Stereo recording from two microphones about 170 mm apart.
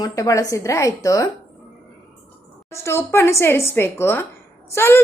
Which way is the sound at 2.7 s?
15° left (ahead or behind).